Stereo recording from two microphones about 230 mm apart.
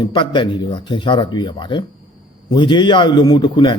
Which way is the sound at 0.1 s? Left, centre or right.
Centre.